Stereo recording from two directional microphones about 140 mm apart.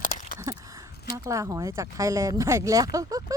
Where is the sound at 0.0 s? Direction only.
80° left.